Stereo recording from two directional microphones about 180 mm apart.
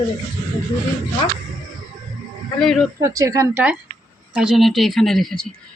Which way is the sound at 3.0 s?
15° right (ahead or behind).